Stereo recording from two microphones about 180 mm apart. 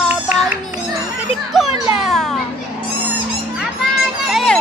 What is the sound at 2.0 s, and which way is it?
Children playing, centre (ahead or behind).